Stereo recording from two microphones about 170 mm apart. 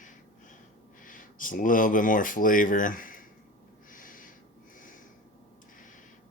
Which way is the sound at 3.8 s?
50° left (ahead or behind).